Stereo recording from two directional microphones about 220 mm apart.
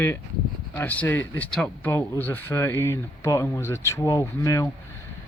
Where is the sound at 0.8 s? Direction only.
10° left (ahead or behind).